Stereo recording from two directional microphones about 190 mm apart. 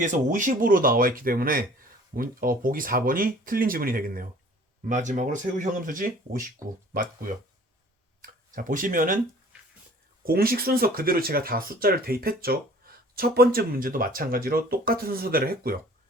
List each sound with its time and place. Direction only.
0.0 s speech: 40° right (ahead or behind)
10.2 s speech: 50° right (ahead or behind)